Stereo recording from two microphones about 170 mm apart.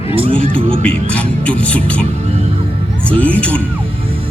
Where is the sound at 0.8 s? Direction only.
5° left (ahead or behind).